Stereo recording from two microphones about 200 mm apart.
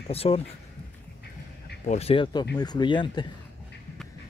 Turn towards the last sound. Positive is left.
turn(degrees=20)  # may be behind; listen again after turning